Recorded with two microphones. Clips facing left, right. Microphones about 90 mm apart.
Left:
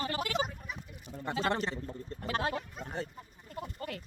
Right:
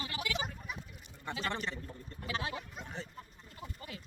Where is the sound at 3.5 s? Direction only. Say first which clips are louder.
Left 8 dB; 60° left (ahead or behind).